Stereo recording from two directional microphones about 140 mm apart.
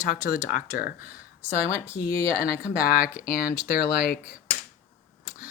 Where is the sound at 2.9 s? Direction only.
90° left.